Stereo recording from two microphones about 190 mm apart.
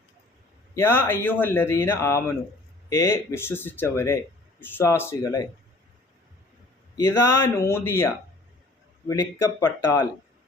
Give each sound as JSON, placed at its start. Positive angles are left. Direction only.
{"t": 0.7, "sound": "speech", "side_deg": 10}
{"t": 6.9, "sound": "speech", "side_deg": 15}